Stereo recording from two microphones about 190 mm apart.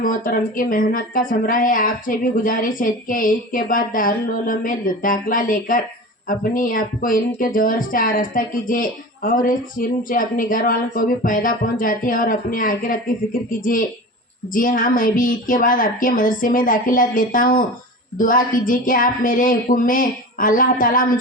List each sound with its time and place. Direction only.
0.0 s speech: 45° left (ahead or behind)
14.5 s speech: 45° left (ahead or behind)